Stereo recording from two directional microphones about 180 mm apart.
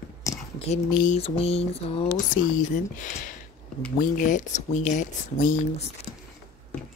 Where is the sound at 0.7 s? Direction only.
40° left (ahead or behind).